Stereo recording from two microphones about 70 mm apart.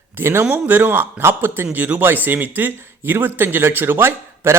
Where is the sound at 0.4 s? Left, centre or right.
Right.